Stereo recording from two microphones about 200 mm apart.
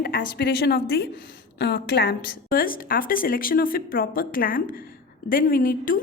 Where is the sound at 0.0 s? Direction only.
50° left (ahead or behind).